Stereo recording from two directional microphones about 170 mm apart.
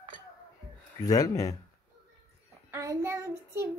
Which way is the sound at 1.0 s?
20° left (ahead or behind).